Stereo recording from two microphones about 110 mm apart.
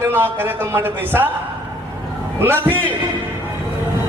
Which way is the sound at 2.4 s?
20° right (ahead or behind).